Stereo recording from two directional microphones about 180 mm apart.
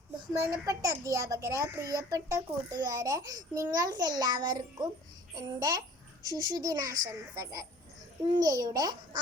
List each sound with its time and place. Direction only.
0.4 s a child's voice: 20° right (ahead or behind)